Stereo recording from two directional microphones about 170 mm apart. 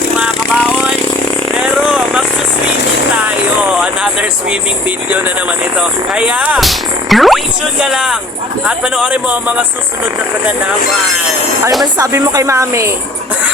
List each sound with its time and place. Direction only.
0.2 s vehicle: centre (ahead or behind)
1.6 s a sound: 5° right (ahead or behind)
3.2 s vehicle: 5° right (ahead or behind)
5.7 s speech: 5° right (ahead or behind)
11.9 s speech: 20° right (ahead or behind)